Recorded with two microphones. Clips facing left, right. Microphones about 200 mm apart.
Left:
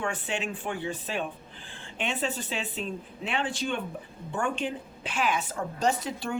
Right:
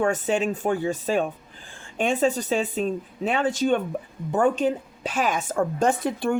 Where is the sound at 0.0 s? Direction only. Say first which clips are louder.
Right 9 dB; 45° right (ahead or behind).